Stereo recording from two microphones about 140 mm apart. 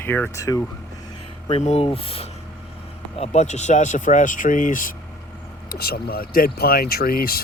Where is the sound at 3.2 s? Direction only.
55° left (ahead or behind); by 5.0 s 75° left (ahead or behind).